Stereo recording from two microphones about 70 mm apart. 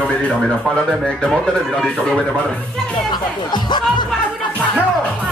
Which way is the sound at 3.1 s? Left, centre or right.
Left.